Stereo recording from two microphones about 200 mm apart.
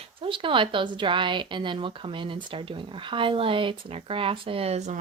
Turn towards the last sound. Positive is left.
turn(degrees=-35)  # may be behind; listen again after turning